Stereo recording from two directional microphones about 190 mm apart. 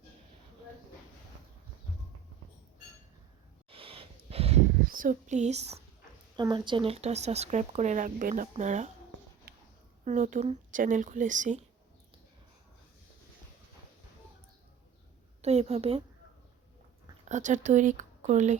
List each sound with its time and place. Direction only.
3.7 s a sound: 30° right (ahead or behind)
4.9 s speech: 45° right (ahead or behind)
6.3 s speech: 25° right (ahead or behind)
9.5 s a sound: 55° right (ahead or behind)
10.0 s speech: 40° right (ahead or behind)
15.4 s a woman's voice: 35° right (ahead or behind)
17.2 s speech: 40° right (ahead or behind)